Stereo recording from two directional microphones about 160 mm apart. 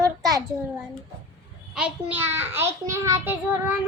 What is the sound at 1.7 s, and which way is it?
Child singing, 5° right (ahead or behind).